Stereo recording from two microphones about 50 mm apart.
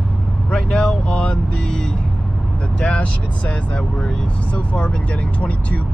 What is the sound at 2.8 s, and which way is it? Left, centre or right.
Speech, left.